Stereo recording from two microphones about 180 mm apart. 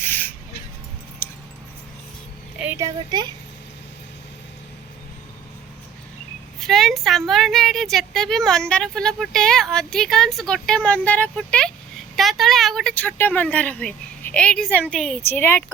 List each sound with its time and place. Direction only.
0.0 s a sound: 10° left (ahead or behind)
1.2 s keys jangling: 10° left (ahead or behind)
2.6 s speech: 15° right (ahead or behind)
6.6 s speech: centre (ahead or behind)